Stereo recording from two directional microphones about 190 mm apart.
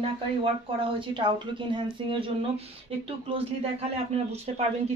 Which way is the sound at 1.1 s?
25° right (ahead or behind).